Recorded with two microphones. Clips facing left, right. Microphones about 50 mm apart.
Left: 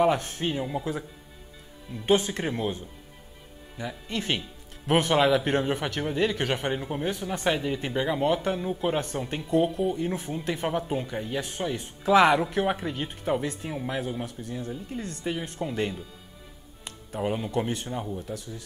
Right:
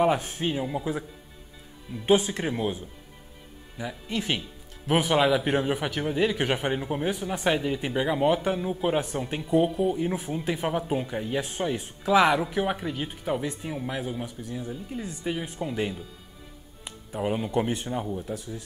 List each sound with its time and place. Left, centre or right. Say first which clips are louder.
0.0 s speech: even; centre
2.0 s a man's voice: right 1 dB; centre
12.0 s a man's voice: left 2 dB; centre
16.8 s music: even; centre
17.6 s speech: right 2 dB; centre
18.2 s speech: right 2 dB; centre